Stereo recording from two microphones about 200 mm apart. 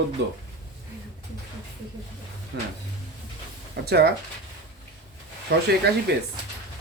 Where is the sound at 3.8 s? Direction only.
55° right (ahead or behind).